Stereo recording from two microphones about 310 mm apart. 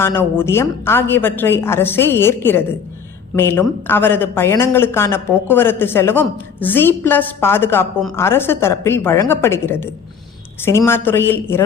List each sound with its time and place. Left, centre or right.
0.0 s a woman's voice: centre